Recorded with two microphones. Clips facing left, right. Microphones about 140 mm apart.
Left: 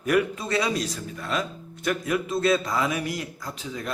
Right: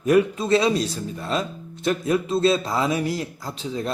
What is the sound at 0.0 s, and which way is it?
Speech, 25° right (ahead or behind).